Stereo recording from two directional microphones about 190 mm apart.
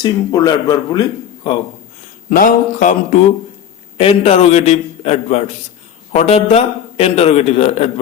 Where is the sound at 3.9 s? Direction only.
30° left (ahead or behind).